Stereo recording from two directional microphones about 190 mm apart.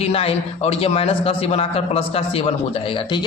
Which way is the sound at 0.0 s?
30° left (ahead or behind).